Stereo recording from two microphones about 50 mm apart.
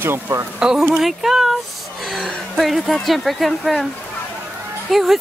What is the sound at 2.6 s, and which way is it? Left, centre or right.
A woman's voice, centre.